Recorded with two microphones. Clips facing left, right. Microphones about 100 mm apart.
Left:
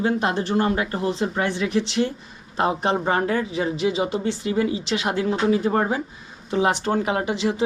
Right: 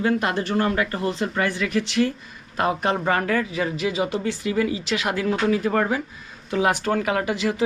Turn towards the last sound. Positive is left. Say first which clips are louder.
# even
turn(degrees=25)  # may be behind; listen again after turning